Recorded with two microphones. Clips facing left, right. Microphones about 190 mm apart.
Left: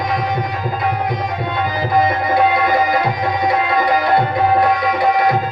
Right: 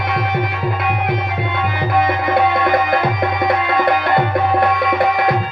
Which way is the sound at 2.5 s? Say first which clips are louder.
Even; 55° right (ahead or behind).